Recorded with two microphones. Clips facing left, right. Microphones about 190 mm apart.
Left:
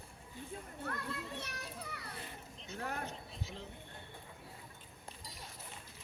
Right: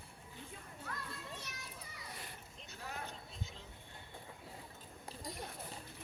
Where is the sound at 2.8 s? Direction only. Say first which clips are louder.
Left 5 dB; 60° left (ahead or behind).